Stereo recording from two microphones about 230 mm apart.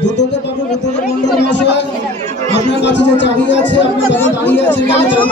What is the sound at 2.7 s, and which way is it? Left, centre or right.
Speech, left.